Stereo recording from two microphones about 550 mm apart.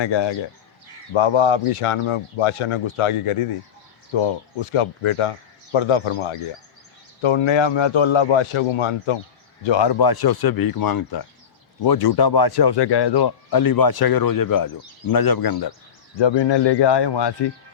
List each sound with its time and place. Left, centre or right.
0.0 s speech: left
9.6 s speech: left